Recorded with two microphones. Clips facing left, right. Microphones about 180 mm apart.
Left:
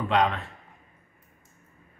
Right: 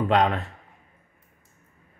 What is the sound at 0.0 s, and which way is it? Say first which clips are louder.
Speech: right 3 dB; 45° right (ahead or behind).